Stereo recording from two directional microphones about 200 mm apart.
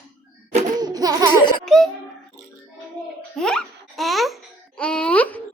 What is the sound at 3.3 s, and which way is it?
Babbling, 5° left (ahead or behind).